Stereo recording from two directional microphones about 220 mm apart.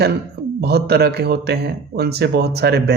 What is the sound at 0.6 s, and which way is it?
A man's voice, 45° right (ahead or behind).